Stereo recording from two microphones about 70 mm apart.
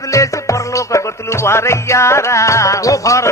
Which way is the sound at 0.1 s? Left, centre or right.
Left.